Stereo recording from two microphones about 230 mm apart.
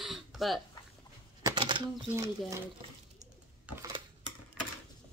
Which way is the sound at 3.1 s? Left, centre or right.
Centre.